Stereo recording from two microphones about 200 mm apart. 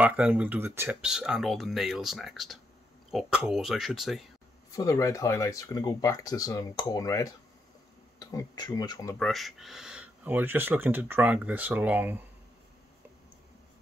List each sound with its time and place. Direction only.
0.0 s speech: 5° right (ahead or behind)
4.7 s speech: 15° left (ahead or behind)
9.2 s speech: centre (ahead or behind)